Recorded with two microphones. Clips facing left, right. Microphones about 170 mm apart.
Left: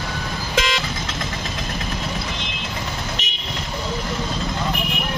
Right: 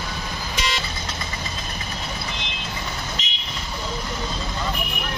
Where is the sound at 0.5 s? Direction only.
90° left.